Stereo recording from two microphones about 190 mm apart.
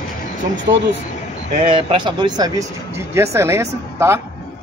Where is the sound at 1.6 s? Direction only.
25° right (ahead or behind).